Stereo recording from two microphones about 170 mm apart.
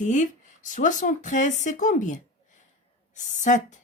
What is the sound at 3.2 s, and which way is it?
Speech, 45° left (ahead or behind).